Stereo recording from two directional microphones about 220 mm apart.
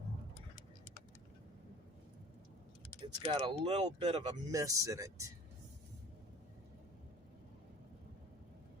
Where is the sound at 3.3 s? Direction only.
20° right (ahead or behind).